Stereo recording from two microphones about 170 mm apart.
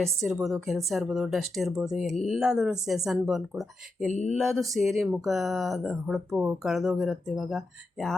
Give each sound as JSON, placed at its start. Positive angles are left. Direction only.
{"t": 0.0, "sound": "speech", "side_deg": 0}
{"t": 4.0, "sound": "a sound", "side_deg": 40}
{"t": 4.4, "sound": "speech", "side_deg": 0}